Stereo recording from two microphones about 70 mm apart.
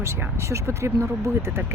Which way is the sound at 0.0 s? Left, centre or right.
Right.